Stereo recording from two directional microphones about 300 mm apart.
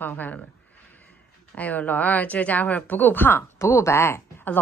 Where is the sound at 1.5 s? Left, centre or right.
Centre.